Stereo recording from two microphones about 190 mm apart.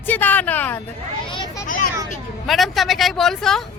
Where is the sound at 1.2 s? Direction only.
25° left (ahead or behind).